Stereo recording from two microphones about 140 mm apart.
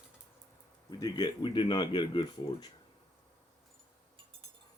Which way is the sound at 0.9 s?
25° left (ahead or behind).